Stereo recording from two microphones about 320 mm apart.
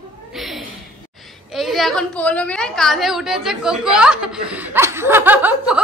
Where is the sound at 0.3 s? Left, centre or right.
Centre.